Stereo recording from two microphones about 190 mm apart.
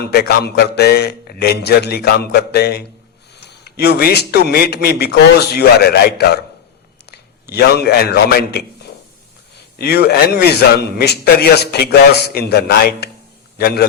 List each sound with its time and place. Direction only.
0.0 s a man's voice: 55° left (ahead or behind)
9.7 s a man's voice: 55° left (ahead or behind)